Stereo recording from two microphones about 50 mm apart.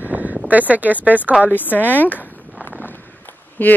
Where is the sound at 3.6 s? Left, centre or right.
Left.